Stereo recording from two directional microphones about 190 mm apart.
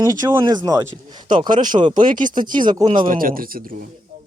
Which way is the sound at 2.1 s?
45° right (ahead or behind).